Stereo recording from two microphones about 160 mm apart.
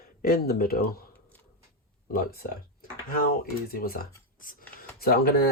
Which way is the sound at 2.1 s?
65° left (ahead or behind).